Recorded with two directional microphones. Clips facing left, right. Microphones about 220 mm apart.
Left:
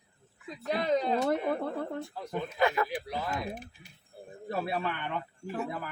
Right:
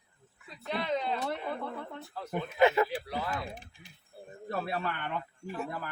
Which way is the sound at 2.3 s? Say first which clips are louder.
Right 3 dB; 20° right (ahead or behind).